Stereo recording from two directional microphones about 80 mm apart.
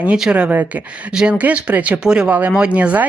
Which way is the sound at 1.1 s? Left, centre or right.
Centre.